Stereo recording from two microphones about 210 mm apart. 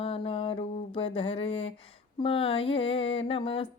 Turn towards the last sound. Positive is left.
turn(degrees=25)  # may be behind; listen again after turning